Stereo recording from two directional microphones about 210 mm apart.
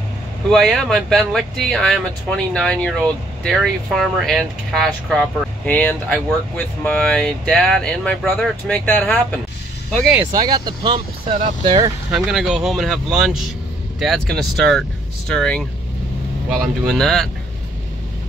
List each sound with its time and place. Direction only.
0.5 s speech: centre (ahead or behind)
10.3 s speech: 20° right (ahead or behind)
12.1 s speech: 5° right (ahead or behind)